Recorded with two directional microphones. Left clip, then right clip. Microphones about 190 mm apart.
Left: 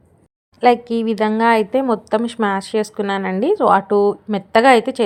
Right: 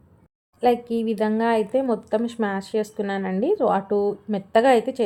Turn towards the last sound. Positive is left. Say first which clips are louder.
# left 6 dB
turn(degrees=10)  # may be behind; listen again after turning